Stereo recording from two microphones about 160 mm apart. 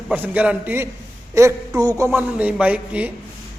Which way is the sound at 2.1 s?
5° right (ahead or behind).